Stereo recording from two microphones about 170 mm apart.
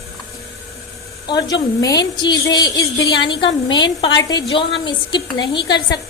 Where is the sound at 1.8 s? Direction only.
25° left (ahead or behind).